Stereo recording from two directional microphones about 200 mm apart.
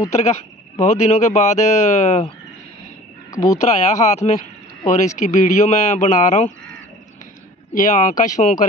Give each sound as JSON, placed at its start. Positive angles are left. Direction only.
{"t": 0.1, "sound": "speech", "side_deg": 35}
{"t": 3.3, "sound": "a sound", "side_deg": 15}
{"t": 3.6, "sound": "speech", "side_deg": 35}
{"t": 7.7, "sound": "speech", "side_deg": 40}